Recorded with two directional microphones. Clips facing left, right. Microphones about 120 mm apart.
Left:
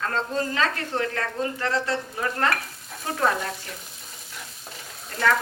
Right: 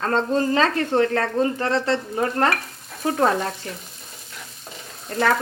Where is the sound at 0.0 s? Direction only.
35° right (ahead or behind).